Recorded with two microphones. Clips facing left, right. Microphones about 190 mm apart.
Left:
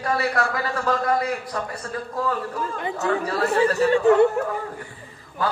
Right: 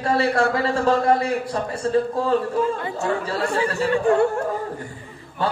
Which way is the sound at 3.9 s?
20° left (ahead or behind).